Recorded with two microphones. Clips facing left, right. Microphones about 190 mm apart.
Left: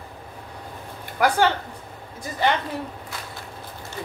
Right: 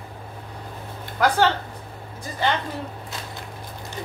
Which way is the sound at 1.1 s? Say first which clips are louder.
Even; 10° left (ahead or behind).